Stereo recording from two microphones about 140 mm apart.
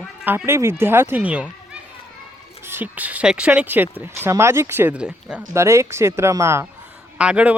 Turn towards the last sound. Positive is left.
turn(degrees=-10)  # may be behind; listen again after turning